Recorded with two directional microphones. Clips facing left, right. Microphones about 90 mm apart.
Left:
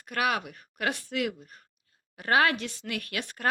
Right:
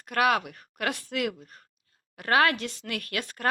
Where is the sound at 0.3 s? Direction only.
20° left (ahead or behind).